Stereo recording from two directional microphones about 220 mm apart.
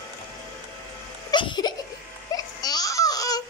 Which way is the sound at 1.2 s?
20° left (ahead or behind).